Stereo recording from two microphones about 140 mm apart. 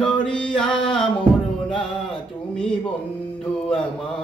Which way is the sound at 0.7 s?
35° left (ahead or behind).